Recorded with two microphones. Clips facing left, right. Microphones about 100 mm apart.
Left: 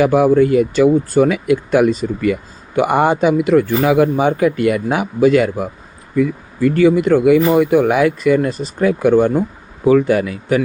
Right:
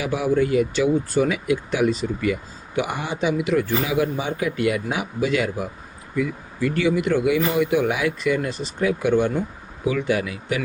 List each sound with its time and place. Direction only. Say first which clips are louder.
0.0 s speech: left 10 dB; 55° left (ahead or behind)